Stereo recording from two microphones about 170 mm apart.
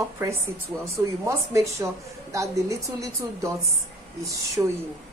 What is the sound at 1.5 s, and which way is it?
A woman's voice, 15° right (ahead or behind).